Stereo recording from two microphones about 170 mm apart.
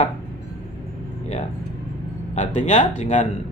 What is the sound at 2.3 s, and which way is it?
Speech, 45° left (ahead or behind).